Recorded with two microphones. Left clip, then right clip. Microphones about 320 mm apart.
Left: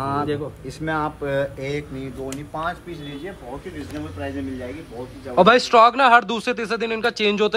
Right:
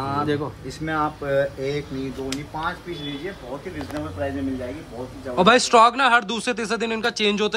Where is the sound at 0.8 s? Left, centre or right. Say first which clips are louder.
Even; left.